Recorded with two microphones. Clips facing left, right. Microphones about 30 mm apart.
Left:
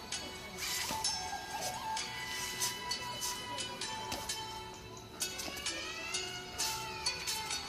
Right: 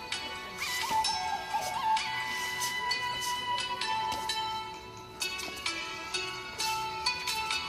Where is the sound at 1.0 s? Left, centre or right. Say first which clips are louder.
Right 8 dB; right.